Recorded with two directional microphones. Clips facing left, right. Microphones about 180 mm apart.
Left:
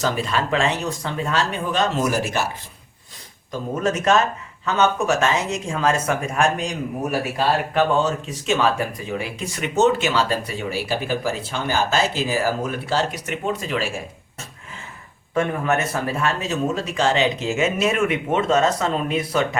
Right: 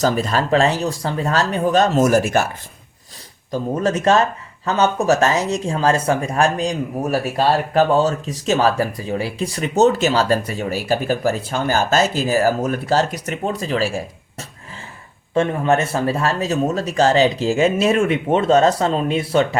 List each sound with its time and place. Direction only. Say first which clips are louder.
0.0 s speech: right 4 dB; 40° right (ahead or behind)
3.5 s speech: right 3 dB; 35° right (ahead or behind)
15.4 s speech: right 4 dB; 30° right (ahead or behind)